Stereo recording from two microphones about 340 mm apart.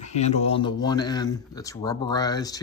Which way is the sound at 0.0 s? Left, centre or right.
Centre.